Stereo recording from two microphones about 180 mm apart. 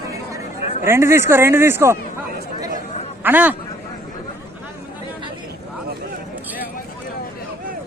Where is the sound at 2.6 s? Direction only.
40° left (ahead or behind).